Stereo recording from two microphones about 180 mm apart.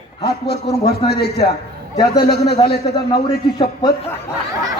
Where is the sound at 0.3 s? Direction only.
65° left (ahead or behind).